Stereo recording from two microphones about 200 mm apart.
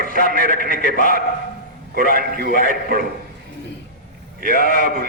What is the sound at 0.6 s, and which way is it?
Speech, 40° left (ahead or behind).